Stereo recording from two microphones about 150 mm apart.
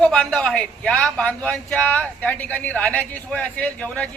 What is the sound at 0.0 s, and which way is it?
A man's voice, 5° left (ahead or behind).